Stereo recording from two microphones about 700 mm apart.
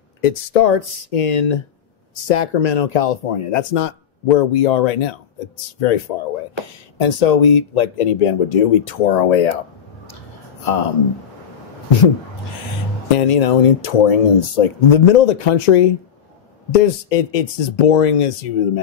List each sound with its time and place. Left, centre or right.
0.2 s speech: left
2.2 s speech: left
10.6 s speech: left
13.1 s speech: left